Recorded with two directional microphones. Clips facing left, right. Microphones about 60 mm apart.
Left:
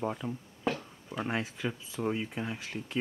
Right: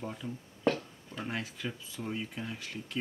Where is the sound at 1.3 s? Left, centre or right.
Left.